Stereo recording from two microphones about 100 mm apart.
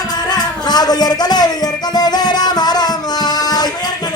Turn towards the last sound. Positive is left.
turn(degrees=40)  # may be behind; listen again after turning